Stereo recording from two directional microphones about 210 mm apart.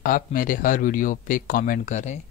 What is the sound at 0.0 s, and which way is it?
Speech, 40° left (ahead or behind).